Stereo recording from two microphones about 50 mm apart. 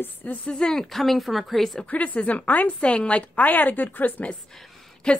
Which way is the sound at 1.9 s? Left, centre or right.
Left.